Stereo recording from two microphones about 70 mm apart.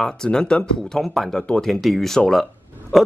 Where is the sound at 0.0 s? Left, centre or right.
Centre.